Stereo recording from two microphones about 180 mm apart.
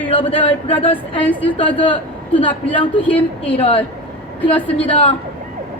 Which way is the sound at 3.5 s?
30° left (ahead or behind).